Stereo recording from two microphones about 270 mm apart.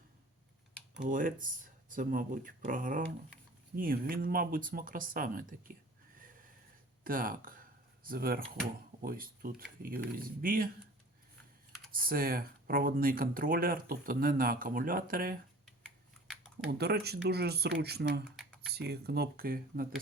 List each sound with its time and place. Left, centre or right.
1.0 s speech: right
7.0 s speech: right
11.9 s speech: right
15.6 s typing: centre
16.6 s speech: right